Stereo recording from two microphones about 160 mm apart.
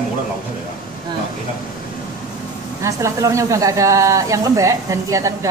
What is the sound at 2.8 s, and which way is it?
Speech, 20° right (ahead or behind).